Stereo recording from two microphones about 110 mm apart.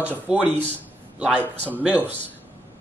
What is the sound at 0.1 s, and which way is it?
Speech, 15° right (ahead or behind).